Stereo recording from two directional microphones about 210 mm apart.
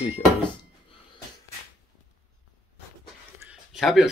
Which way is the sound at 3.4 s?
Centre (ahead or behind).